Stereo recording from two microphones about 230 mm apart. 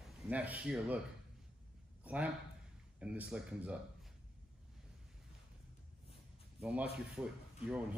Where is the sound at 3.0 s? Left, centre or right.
Centre.